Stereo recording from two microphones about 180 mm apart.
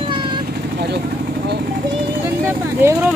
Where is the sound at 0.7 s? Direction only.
65° right (ahead or behind).